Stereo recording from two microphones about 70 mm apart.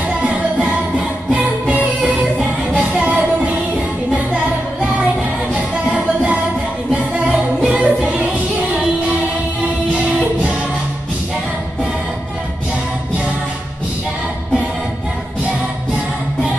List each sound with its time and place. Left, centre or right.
0.2 s music: centre
2.7 s music: centre
5.5 s music: centre